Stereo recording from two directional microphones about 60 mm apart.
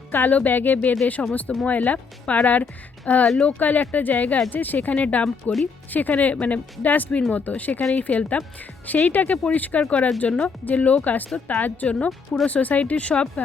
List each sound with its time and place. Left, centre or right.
0.1 s speech: left; by 12.5 s centre
12.5 s speech: left